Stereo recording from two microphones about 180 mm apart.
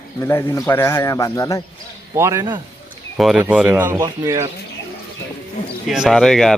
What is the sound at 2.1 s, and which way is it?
Speech, 15° right (ahead or behind).